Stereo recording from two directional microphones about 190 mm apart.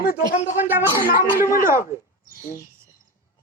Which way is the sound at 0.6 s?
10° right (ahead or behind).